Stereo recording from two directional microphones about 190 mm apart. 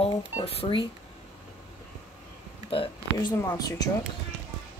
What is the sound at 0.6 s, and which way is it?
Speech, 25° left (ahead or behind).